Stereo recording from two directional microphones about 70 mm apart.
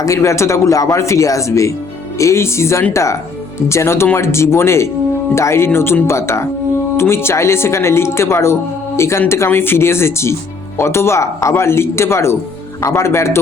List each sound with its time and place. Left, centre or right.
0.0 s speech: left